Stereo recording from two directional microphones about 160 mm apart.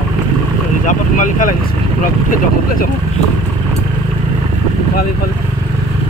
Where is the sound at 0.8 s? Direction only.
55° left (ahead or behind).